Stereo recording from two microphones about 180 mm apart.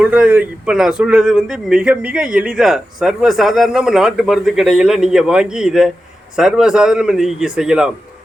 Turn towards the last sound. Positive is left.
turn(degrees=-5)  # may be behind; listen again after turning